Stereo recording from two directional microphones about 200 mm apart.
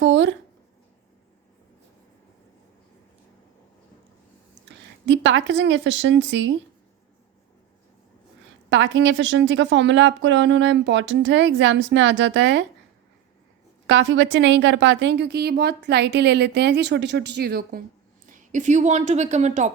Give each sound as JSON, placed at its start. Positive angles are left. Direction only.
{"t": 0.0, "sound": "a sound", "side_deg": -65}
{"t": 5.0, "sound": "a woman's voice", "side_deg": -65}
{"t": 8.7, "sound": "a woman's voice", "side_deg": -65}
{"t": 13.8, "sound": "a woman's voice", "side_deg": -65}